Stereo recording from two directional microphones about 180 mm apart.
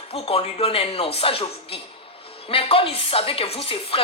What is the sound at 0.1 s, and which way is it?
A woman's voice, 30° left (ahead or behind).